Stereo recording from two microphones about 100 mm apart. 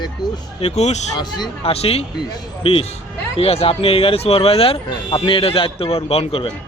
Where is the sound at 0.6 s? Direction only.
90° left.